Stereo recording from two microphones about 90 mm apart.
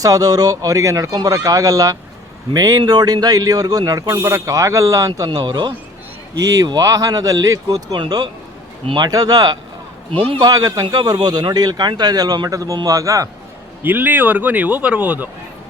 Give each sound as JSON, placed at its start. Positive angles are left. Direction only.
{"t": 0.0, "sound": "a man's voice", "side_deg": -45}
{"t": 6.7, "sound": "speech", "side_deg": -40}
{"t": 9.0, "sound": "a man's voice", "side_deg": -45}
{"t": 10.1, "sound": "a man's voice", "side_deg": -85}
{"t": 10.4, "sound": "a man's voice", "side_deg": -40}
{"t": 13.8, "sound": "speech", "side_deg": -20}